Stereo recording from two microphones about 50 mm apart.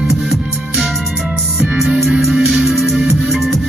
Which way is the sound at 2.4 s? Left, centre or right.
Right.